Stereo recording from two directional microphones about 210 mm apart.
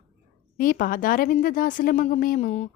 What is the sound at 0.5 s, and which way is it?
A woman's voice, 40° left (ahead or behind).